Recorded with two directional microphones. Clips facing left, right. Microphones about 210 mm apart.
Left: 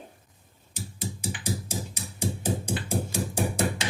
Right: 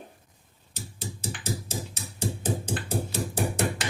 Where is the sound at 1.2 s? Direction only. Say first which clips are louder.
Even; 10° left (ahead or behind).